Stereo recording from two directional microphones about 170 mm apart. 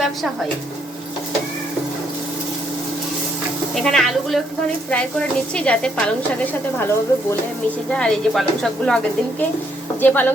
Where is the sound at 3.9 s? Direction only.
Centre (ahead or behind).